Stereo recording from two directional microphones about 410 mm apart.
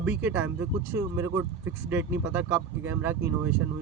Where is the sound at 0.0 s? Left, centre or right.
Centre.